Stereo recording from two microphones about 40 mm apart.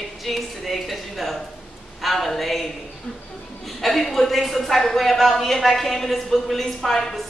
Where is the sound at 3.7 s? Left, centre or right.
Centre.